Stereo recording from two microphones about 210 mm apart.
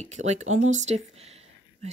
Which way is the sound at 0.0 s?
35° right (ahead or behind).